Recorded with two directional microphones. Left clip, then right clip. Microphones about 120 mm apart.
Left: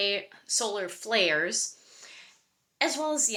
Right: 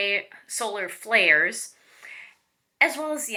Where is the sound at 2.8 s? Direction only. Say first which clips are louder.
Right 4 dB; 30° left (ahead or behind).